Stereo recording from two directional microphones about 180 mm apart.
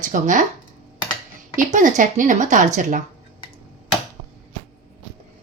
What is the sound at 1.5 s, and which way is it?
A woman's voice, 45° right (ahead or behind).